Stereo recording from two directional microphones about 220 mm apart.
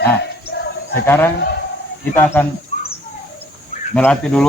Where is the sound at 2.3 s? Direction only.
10° left (ahead or behind).